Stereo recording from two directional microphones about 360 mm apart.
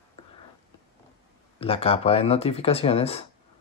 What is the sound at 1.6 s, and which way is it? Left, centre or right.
Speech, centre.